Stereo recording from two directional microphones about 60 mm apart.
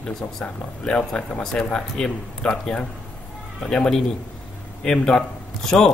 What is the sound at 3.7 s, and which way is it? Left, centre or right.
A man's voice, centre.